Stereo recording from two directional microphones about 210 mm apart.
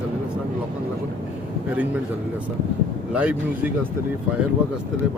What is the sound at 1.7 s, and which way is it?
Speech, 5° right (ahead or behind).